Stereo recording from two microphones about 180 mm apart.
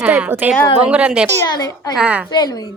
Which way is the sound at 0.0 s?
10° right (ahead or behind).